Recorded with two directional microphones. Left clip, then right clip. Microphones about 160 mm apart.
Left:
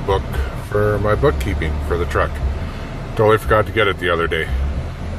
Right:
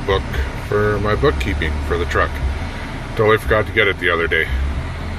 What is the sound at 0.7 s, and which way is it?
Speech, 10° left (ahead or behind).